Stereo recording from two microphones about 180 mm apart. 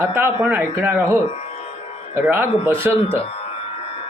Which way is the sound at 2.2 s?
10° right (ahead or behind).